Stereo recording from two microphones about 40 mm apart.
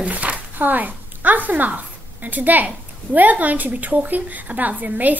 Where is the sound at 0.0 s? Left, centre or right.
Right.